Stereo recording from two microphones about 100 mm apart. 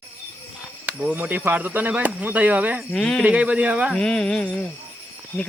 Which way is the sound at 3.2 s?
10° right (ahead or behind).